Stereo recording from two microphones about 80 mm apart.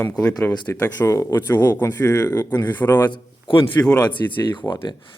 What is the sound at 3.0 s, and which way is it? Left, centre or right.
Speech, left.